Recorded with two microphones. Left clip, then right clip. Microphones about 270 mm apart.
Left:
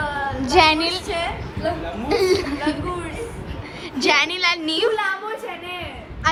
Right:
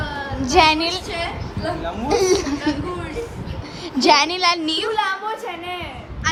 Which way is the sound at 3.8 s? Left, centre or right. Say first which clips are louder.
Right 3 dB; centre.